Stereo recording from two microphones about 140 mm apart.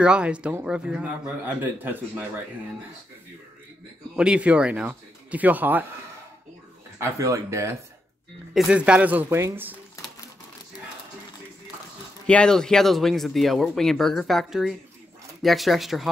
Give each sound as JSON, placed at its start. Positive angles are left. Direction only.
{"t": 0.0, "sound": "a man's voice", "side_deg": -5}
{"t": 4.2, "sound": "a man's voice", "side_deg": -10}
{"t": 7.0, "sound": "speech", "side_deg": -20}
{"t": 8.5, "sound": "a man's voice", "side_deg": -5}
{"t": 12.3, "sound": "speech", "side_deg": 5}